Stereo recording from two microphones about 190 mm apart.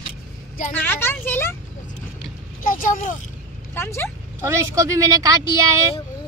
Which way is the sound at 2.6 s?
45° left (ahead or behind).